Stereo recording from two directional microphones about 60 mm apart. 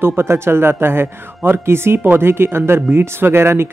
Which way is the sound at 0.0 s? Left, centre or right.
Right.